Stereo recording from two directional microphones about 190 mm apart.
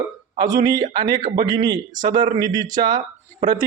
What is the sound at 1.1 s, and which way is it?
A man's voice, 45° right (ahead or behind).